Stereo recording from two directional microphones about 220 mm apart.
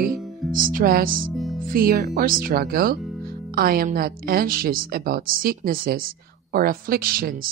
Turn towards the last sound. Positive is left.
turn(degrees=-40)  # may be behind; listen again after turning